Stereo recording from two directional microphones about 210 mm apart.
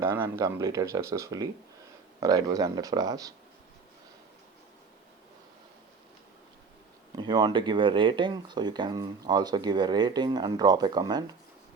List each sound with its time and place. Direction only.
0.0 s speech: 15° right (ahead or behind)
7.2 s speech: 20° right (ahead or behind)